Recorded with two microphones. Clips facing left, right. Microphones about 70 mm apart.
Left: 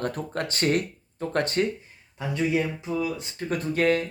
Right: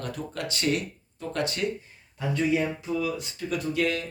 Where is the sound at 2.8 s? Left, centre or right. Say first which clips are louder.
Even; left.